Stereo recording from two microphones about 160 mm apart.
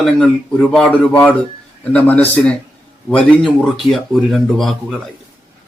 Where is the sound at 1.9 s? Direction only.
10° left (ahead or behind).